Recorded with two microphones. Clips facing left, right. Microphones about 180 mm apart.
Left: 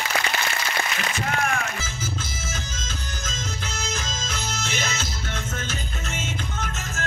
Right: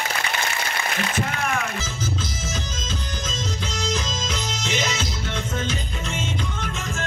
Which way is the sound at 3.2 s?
50° left (ahead or behind).